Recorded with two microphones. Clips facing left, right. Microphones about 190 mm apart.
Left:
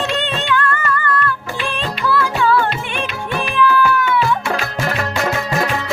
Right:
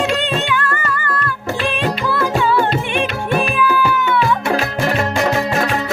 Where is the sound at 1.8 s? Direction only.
20° right (ahead or behind).